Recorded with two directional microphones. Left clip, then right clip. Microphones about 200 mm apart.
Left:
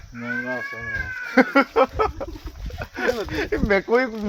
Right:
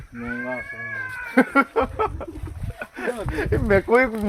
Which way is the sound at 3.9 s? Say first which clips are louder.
Right 2 dB; 30° right (ahead or behind).